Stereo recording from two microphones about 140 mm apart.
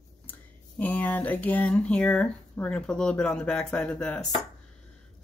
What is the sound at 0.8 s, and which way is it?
Speech, 10° left (ahead or behind).